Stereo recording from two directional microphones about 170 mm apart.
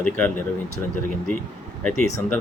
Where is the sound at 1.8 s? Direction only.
5° left (ahead or behind).